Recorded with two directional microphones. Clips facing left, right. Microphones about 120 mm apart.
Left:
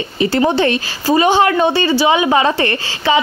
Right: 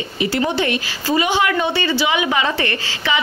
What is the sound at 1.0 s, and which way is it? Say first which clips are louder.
A woman's voice: left 6 dB; 35° left (ahead or behind).